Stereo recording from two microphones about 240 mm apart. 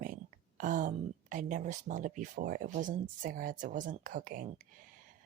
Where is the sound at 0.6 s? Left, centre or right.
Right.